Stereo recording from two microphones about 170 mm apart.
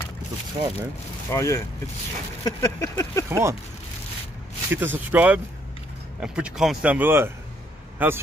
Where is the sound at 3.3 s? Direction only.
15° right (ahead or behind).